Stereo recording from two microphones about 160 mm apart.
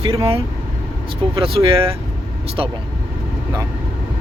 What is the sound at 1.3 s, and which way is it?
Speech, 35° right (ahead or behind).